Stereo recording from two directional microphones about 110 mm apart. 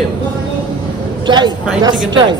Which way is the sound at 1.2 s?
40° right (ahead or behind).